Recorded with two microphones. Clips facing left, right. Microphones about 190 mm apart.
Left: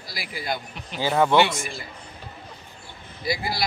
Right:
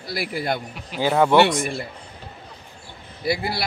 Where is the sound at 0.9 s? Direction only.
10° right (ahead or behind).